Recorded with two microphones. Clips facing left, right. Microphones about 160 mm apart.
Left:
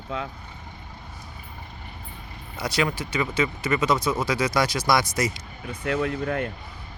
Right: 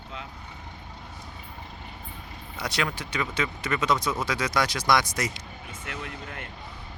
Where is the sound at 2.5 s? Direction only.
5° left (ahead or behind).